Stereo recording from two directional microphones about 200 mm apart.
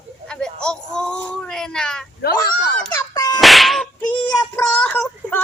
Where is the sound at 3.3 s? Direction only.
Centre (ahead or behind).